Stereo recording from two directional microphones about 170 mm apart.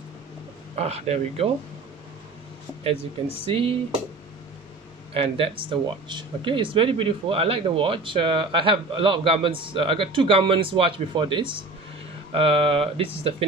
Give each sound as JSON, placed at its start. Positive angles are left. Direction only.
{"t": 0.7, "sound": "speech", "side_deg": -40}
{"t": 2.8, "sound": "speech", "side_deg": -35}
{"t": 5.1, "sound": "speech", "side_deg": -35}